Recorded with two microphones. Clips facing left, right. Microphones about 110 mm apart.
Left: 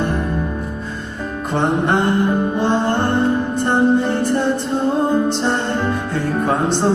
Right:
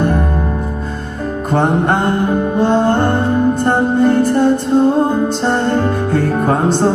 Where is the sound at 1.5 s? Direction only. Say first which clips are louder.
Right 3 dB; 45° right (ahead or behind).